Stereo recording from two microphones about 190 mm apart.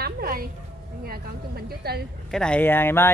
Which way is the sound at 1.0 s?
55° right (ahead or behind).